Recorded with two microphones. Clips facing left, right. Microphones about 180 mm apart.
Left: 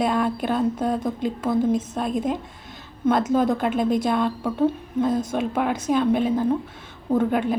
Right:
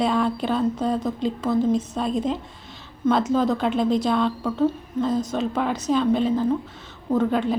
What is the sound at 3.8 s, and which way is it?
Speech, 50° left (ahead or behind).